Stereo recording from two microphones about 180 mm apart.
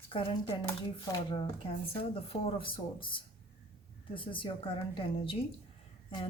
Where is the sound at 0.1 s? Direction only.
30° left (ahead or behind).